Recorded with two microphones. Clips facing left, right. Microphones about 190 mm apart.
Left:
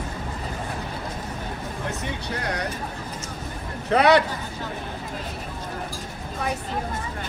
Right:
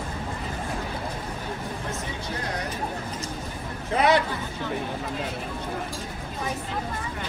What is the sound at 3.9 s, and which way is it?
Speech, 70° left (ahead or behind).